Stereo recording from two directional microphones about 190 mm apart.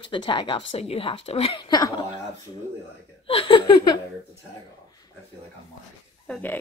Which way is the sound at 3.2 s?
25° left (ahead or behind).